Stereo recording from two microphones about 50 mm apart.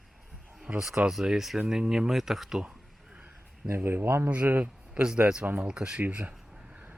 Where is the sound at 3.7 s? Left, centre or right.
Right.